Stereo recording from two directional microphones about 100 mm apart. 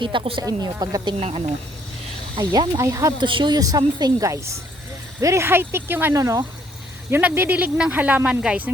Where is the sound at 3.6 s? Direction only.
40° right (ahead or behind); by 6.2 s 20° right (ahead or behind).